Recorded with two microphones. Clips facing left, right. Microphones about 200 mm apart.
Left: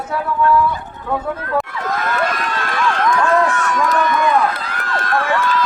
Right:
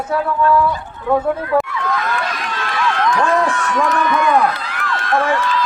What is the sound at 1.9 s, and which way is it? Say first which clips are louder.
Run: left 1 dB; 45° left (ahead or behind).